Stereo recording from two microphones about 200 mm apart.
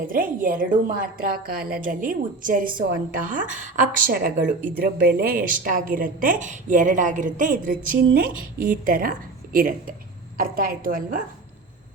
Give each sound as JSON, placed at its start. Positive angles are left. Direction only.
{"t": 0.1, "sound": "a woman's voice", "side_deg": -45}